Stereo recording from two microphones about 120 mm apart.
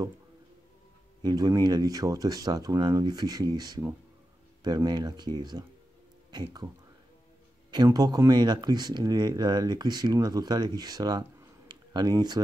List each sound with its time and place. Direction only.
1.2 s speech: 35° right (ahead or behind)
7.7 s speech: 30° right (ahead or behind)